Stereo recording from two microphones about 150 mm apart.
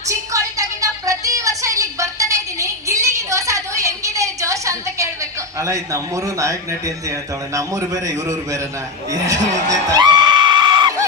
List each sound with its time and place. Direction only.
0.1 s a sound: 20° right (ahead or behind)
5.5 s speech: 20° right (ahead or behind)
9.9 s screaming: 30° right (ahead or behind)